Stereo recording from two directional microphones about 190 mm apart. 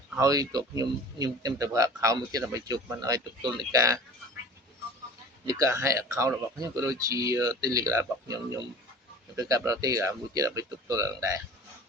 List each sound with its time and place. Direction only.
0.1 s speech: 15° right (ahead or behind)
5.5 s speech: 15° right (ahead or behind)